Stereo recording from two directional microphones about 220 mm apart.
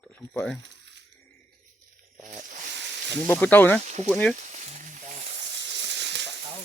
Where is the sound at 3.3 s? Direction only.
5° left (ahead or behind).